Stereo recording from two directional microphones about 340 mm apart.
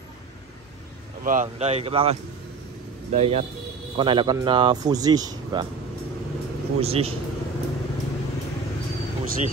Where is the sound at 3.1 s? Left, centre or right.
Centre.